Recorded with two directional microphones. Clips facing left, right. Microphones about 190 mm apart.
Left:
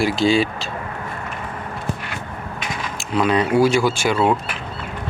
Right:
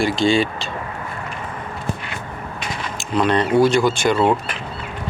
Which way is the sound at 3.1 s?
5° left (ahead or behind).